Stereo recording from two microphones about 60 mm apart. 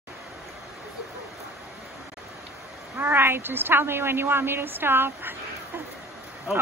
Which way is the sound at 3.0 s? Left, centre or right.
Right.